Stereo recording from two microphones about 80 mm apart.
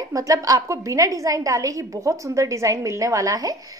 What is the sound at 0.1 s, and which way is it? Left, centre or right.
A woman's voice, right.